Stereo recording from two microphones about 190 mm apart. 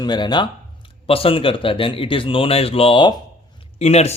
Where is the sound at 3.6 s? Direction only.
35° left (ahead or behind).